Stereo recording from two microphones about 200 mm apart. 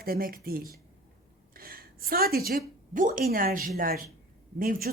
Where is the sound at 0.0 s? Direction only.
50° right (ahead or behind).